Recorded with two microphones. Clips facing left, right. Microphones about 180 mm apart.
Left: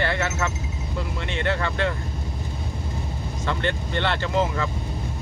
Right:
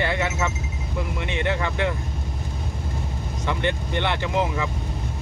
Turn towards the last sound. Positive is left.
turn(degrees=-15)  # may be behind; listen again after turning